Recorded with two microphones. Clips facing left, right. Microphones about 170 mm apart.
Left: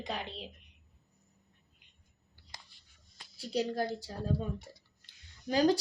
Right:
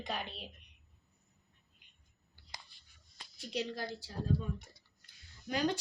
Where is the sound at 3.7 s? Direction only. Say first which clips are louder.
Left 7 dB; 45° left (ahead or behind).